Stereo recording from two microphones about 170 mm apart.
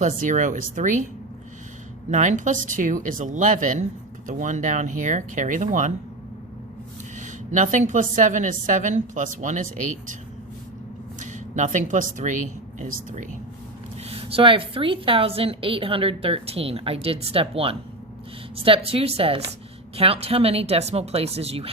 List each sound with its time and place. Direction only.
0.0 s a woman's voice: 50° right (ahead or behind)
2.0 s a woman's voice: 45° right (ahead or behind)
7.2 s a woman's voice: 45° right (ahead or behind)
11.2 s speech: 45° right (ahead or behind)
14.0 s a woman's voice: 35° right (ahead or behind)